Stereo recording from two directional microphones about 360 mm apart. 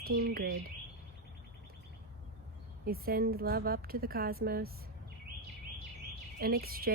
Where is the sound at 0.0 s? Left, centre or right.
Right.